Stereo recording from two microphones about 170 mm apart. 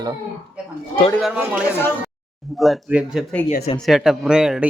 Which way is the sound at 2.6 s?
Centre (ahead or behind).